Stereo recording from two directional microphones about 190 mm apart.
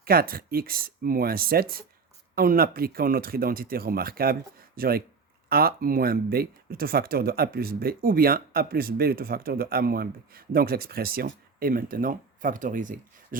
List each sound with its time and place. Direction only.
0.0 s speech: 50° right (ahead or behind)